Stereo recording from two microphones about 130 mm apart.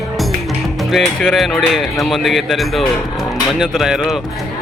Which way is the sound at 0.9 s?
Centre (ahead or behind).